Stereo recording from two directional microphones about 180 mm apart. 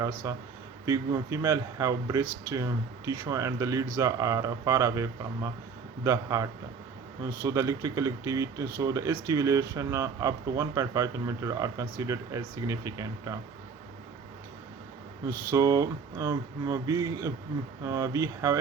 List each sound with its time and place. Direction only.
0.0 s speech: 15° right (ahead or behind)
15.3 s speech: 20° right (ahead or behind)